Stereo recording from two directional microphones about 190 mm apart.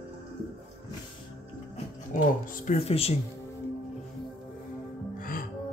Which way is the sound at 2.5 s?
45° left (ahead or behind).